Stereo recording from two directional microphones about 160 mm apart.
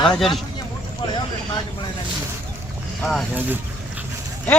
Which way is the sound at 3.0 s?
5° left (ahead or behind).